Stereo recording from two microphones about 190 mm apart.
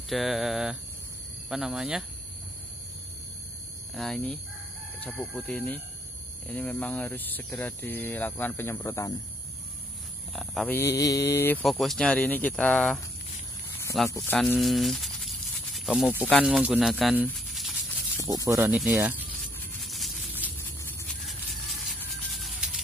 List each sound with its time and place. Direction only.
0.1 s speech: centre (ahead or behind)
3.9 s speech: centre (ahead or behind); by 9.1 s 15° left (ahead or behind)
10.3 s speech: centre (ahead or behind)
10.8 s speech: 15° left (ahead or behind)
11.6 s speech: centre (ahead or behind)
14.1 s speech: 10° left (ahead or behind)
14.4 s rattle: centre (ahead or behind)
16.4 s speech: 5° right (ahead or behind)
17.3 s a sound: centre (ahead or behind)
18.2 s speech: 20° right (ahead or behind)
18.7 s speech: 5° right (ahead or behind)
19.8 s a sound: centre (ahead or behind)
20.8 s a sound: 10° left (ahead or behind)
22.3 s music: centre (ahead or behind)